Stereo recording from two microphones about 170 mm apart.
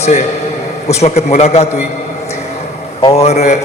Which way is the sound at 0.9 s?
40° left (ahead or behind).